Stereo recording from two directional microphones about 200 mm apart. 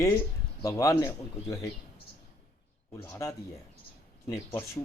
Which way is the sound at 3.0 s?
15° left (ahead or behind).